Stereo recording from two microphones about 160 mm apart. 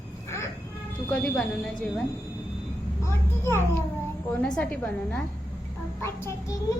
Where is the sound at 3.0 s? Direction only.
15° left (ahead or behind).